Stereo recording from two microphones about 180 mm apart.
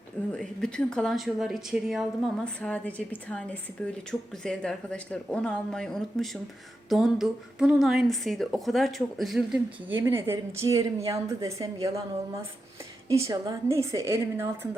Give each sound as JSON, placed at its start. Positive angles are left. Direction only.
{"t": 0.3, "sound": "a woman's voice", "side_deg": 5}
{"t": 9.9, "sound": "a woman's voice", "side_deg": -15}
{"t": 13.1, "sound": "a woman's voice", "side_deg": -15}